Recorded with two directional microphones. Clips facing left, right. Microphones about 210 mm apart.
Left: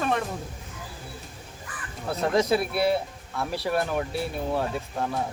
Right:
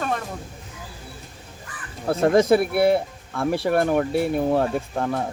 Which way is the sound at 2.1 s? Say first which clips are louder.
Right 6 dB; 50° right (ahead or behind).